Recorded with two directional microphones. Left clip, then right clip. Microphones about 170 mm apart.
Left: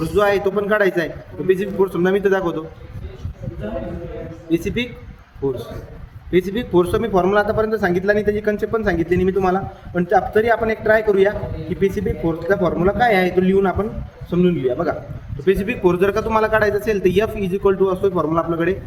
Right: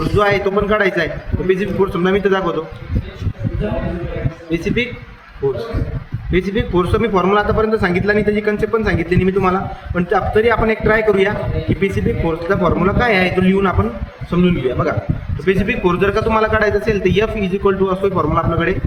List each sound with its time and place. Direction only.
0.2 s a man's voice: 70° left (ahead or behind)
4.5 s a man's voice: 70° left (ahead or behind)
6.3 s a man's voice: 70° left (ahead or behind)